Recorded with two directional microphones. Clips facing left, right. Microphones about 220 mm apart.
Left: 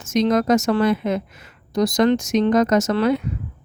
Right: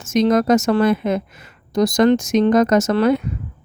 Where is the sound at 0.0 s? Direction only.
50° right (ahead or behind).